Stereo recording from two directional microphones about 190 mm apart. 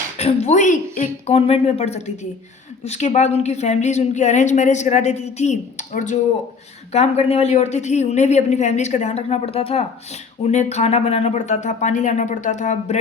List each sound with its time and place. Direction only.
0.2 s a woman's voice: 35° left (ahead or behind)